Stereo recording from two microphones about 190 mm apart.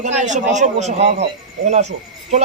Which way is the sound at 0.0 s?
40° right (ahead or behind).